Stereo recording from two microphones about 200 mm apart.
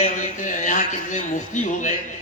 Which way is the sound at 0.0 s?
35° left (ahead or behind).